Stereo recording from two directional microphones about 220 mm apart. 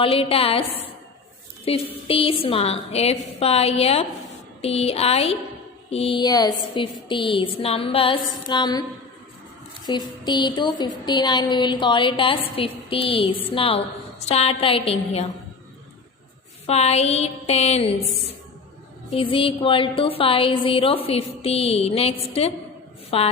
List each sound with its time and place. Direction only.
0.0 s a woman's voice: 25° left (ahead or behind)
1.7 s a woman's voice: 25° left (ahead or behind)
9.8 s a woman's voice: 20° left (ahead or behind)
16.6 s a woman's voice: 30° left (ahead or behind)
19.1 s a woman's voice: 25° left (ahead or behind)